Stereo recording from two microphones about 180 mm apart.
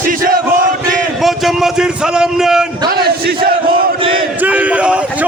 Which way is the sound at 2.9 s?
55° right (ahead or behind).